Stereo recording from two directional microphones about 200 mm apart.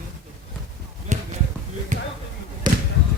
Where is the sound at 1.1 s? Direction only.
35° right (ahead or behind).